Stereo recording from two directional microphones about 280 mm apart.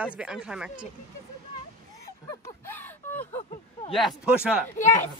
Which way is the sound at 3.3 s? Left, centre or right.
Left.